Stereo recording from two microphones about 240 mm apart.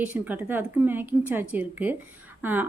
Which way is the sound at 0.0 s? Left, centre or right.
Centre.